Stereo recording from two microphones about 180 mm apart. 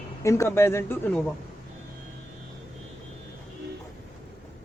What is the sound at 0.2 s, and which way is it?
Speech, 15° left (ahead or behind).